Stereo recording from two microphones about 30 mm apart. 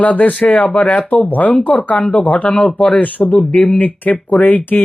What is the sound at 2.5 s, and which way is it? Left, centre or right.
Speech, centre.